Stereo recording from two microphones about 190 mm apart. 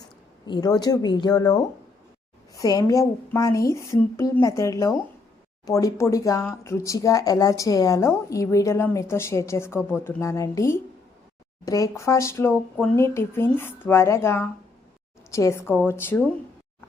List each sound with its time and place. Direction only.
0.4 s speech: 20° left (ahead or behind)